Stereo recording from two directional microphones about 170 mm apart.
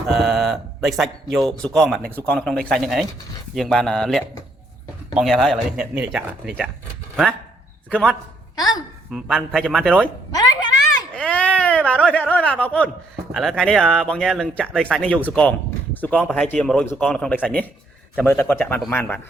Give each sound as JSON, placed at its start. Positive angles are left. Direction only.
{"t": 0.1, "sound": "speech", "side_deg": 0}
{"t": 7.9, "sound": "a man's voice", "side_deg": 5}
{"t": 8.5, "sound": "a woman's voice", "side_deg": 20}
{"t": 9.1, "sound": "speech", "side_deg": 0}
{"t": 11.1, "sound": "a sound", "side_deg": 5}
{"t": 13.3, "sound": "a man's voice", "side_deg": 0}